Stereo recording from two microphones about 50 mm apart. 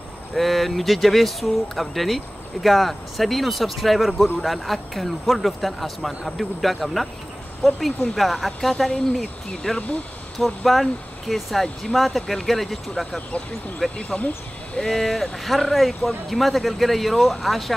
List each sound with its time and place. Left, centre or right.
0.4 s speech: centre
13.9 s speech: left
14.8 s speech: centre